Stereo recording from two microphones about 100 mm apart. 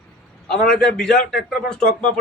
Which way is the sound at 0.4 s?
5° left (ahead or behind).